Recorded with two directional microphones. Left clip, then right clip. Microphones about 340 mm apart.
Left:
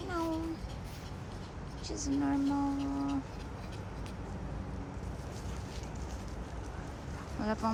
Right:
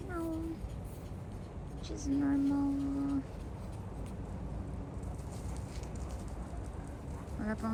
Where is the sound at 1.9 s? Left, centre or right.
Centre.